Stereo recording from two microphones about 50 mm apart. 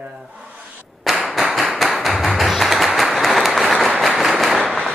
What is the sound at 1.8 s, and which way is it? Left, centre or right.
Tap, centre.